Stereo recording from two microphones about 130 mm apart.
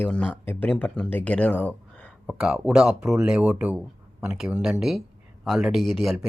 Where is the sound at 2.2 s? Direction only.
5° right (ahead or behind).